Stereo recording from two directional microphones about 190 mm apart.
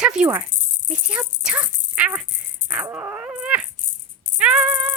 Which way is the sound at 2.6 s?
5° right (ahead or behind).